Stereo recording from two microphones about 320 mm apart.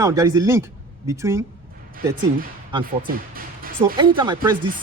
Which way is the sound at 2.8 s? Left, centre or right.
Right.